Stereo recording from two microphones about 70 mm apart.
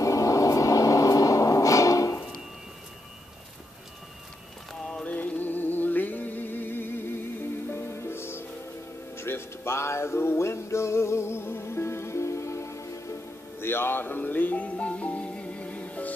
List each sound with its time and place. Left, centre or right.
0.0 s a sound: left
5.0 s music: left
13.6 s music: left